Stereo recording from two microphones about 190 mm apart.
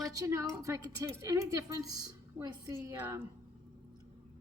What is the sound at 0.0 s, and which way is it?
A woman's voice, 15° right (ahead or behind).